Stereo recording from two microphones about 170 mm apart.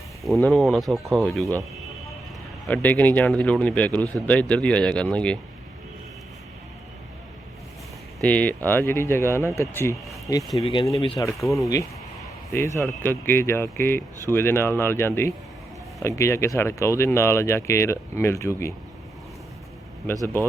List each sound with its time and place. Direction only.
0.4 s speech: centre (ahead or behind)
2.6 s speech: 10° left (ahead or behind)
8.2 s speech: 10° left (ahead or behind)
10.6 s speech: 30° left (ahead or behind)
11.2 s speech: 20° left (ahead or behind)